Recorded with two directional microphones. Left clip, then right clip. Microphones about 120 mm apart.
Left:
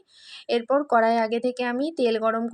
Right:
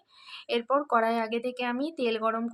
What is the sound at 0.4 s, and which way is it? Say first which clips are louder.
Speech: left 4 dB; 35° left (ahead or behind).